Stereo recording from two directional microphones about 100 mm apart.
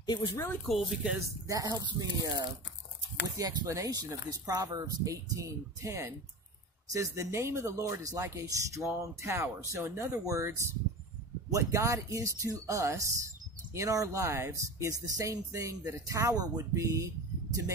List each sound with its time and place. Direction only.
0.0 s speech: 45° left (ahead or behind)
0.7 s speech: centre (ahead or behind)
1.5 s speech: 35° right (ahead or behind)